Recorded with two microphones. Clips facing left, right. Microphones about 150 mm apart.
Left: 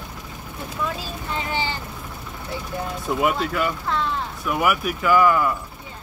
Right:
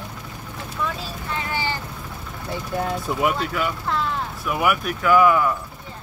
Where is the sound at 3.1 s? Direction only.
Centre (ahead or behind).